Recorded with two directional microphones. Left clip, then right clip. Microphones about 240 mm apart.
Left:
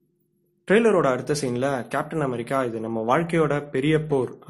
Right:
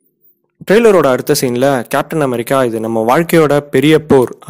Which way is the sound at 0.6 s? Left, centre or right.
Right.